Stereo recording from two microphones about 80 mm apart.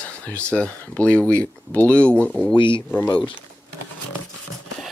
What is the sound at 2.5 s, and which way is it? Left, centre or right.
Speech, left.